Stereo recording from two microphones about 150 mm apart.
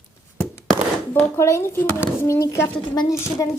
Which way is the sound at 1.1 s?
20° left (ahead or behind).